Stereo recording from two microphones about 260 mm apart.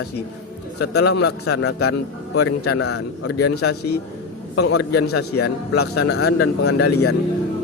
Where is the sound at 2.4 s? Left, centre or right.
Left.